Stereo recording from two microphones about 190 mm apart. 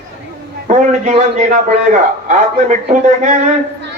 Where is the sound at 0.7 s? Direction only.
40° right (ahead or behind).